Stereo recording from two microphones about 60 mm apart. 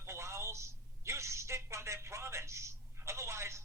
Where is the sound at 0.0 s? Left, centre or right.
Right.